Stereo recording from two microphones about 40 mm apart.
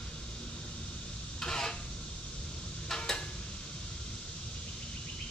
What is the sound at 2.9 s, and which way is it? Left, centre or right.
Tick-tock, centre.